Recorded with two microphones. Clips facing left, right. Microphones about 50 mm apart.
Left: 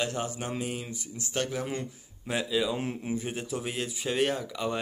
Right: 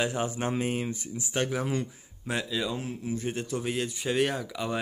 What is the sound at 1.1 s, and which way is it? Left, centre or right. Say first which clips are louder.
Speech: right 1 dB; centre.